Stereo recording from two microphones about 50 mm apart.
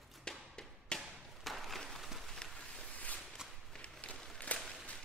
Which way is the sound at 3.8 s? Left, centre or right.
Left.